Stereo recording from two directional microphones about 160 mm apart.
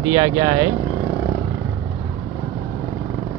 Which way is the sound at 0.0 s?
30° right (ahead or behind).